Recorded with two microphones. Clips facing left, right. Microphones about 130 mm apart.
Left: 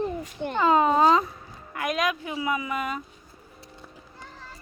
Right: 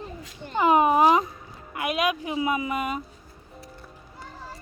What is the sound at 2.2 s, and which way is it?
Speech, 25° right (ahead or behind).